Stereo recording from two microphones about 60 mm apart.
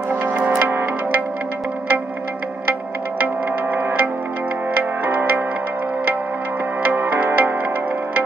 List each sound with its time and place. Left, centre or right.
0.3 s music: right
6.8 s music: right